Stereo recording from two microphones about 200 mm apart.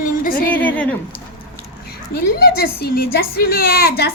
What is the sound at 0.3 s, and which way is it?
Speech, 45° left (ahead or behind).